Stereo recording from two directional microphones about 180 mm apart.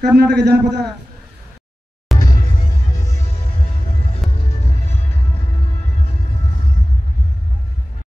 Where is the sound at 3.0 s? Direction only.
40° left (ahead or behind).